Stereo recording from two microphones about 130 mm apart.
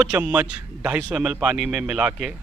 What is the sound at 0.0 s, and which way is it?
Speech, 10° right (ahead or behind).